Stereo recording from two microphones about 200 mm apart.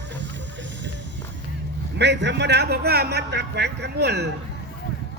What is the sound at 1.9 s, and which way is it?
A man's voice, 60° right (ahead or behind).